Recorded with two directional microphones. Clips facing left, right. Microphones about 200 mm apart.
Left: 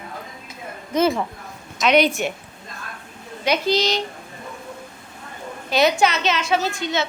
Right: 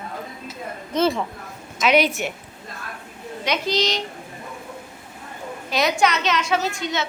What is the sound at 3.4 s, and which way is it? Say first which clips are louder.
Speech: left 3 dB; 5° left (ahead or behind).